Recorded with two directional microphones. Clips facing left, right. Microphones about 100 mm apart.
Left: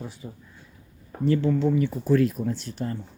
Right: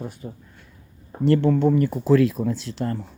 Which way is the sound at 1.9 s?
90° right.